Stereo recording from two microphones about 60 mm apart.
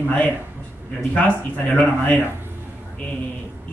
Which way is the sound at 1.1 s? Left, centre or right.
Left.